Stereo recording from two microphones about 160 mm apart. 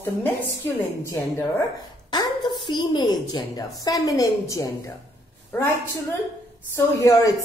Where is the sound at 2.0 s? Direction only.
25° left (ahead or behind).